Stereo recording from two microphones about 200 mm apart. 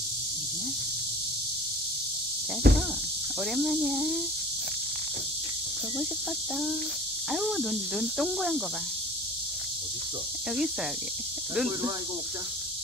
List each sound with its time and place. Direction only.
2.6 s insect: 50° right (ahead or behind)
3.5 s speech: centre (ahead or behind)
7.2 s speech: centre (ahead or behind)
11.5 s speech: 5° right (ahead or behind)